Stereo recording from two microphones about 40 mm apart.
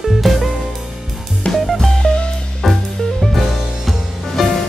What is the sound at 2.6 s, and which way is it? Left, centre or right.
Music, centre.